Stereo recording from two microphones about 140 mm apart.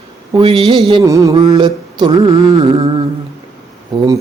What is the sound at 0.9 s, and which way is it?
Mantra, 25° right (ahead or behind).